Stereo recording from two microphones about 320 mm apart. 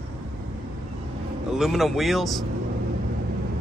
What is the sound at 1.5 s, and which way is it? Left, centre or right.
Speech, centre.